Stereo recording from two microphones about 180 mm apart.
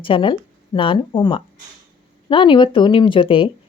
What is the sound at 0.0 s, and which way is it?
A woman's voice, 30° left (ahead or behind).